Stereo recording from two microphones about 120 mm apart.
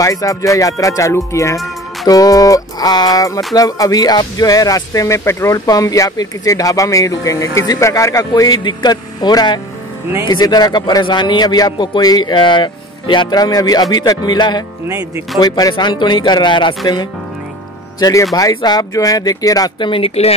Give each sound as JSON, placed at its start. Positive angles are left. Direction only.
{"t": 0.0, "sound": "a man's voice", "side_deg": 30}
{"t": 19.9, "sound": "speech", "side_deg": 55}